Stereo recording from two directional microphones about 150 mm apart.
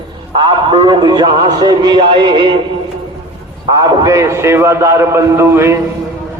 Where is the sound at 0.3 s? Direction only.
30° right (ahead or behind).